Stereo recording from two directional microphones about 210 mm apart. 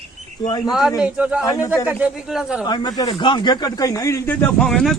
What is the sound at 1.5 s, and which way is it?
Speech, 15° left (ahead or behind).